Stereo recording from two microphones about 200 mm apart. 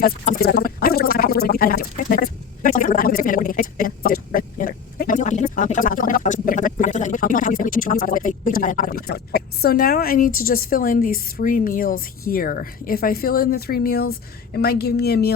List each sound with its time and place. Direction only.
0.0 s speech: 50° left (ahead or behind)